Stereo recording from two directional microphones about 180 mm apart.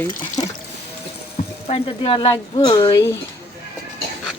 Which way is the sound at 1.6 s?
35° left (ahead or behind).